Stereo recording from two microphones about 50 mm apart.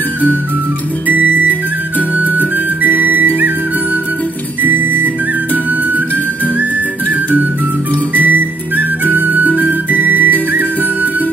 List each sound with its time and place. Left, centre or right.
1.0 s music: right
4.6 s music: right
8.1 s music: right